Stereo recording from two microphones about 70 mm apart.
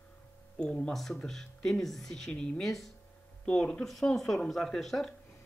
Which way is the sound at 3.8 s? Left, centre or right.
Centre.